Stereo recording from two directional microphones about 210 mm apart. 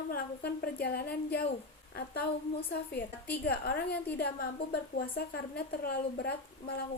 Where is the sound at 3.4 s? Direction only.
50° left (ahead or behind).